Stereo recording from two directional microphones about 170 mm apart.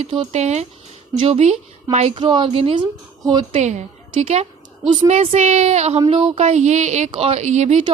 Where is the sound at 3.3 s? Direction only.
25° right (ahead or behind).